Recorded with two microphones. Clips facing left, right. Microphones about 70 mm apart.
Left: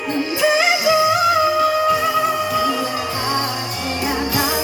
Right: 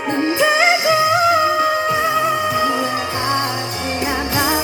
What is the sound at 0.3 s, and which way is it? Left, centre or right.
Music, right.